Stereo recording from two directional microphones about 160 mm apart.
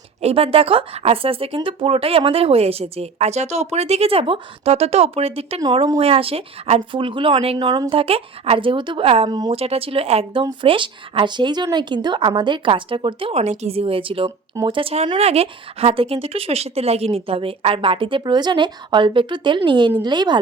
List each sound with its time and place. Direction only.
0.2 s speech: 40° right (ahead or behind)
5.5 s speech: 30° right (ahead or behind)
14.3 s speech: 25° right (ahead or behind)